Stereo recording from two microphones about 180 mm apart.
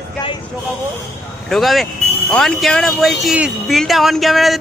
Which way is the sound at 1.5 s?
Centre (ahead or behind).